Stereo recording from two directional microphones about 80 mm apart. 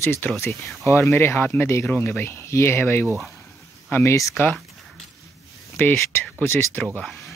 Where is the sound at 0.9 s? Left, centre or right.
Left.